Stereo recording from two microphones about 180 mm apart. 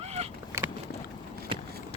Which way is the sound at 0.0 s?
35° right (ahead or behind).